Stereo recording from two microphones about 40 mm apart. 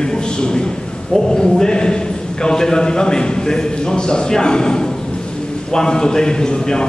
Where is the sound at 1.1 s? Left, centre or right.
Centre.